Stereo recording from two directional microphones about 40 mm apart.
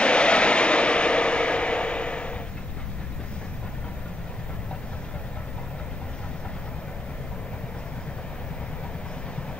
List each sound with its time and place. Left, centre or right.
0.0 s vehicle: left